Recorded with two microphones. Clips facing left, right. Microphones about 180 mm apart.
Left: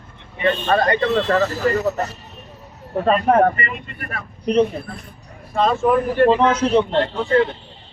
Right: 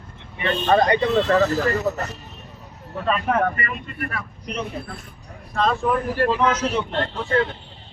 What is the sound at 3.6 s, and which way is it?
Speech, 25° left (ahead or behind).